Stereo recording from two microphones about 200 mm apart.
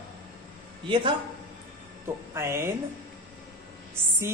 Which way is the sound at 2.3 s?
15° right (ahead or behind).